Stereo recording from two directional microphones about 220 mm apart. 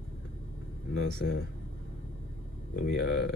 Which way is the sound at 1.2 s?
55° left (ahead or behind).